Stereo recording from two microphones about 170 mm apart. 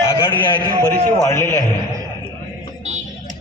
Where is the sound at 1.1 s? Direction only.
15° left (ahead or behind).